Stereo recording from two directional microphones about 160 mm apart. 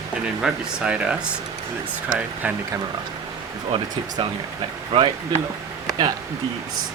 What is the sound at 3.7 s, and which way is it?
Speech, 35° right (ahead or behind).